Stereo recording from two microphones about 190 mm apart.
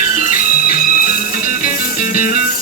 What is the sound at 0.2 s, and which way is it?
Music, 45° left (ahead or behind).